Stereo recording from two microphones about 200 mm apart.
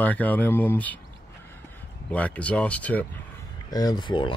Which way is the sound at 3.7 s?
20° left (ahead or behind).